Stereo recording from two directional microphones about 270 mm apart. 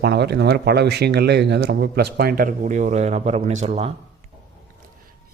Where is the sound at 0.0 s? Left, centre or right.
Right.